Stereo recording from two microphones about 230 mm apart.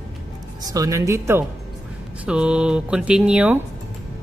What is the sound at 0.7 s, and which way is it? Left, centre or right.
A woman's voice, centre.